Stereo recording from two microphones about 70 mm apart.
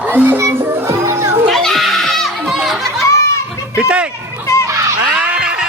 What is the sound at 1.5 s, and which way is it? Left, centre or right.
Children playing, centre.